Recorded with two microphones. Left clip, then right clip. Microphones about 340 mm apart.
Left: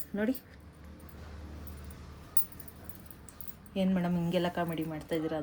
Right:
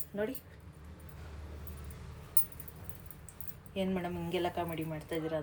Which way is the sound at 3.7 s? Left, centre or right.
Left.